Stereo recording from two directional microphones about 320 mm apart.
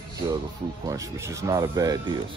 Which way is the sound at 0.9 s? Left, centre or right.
Centre.